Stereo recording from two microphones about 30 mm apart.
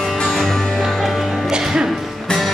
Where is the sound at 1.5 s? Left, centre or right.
Right.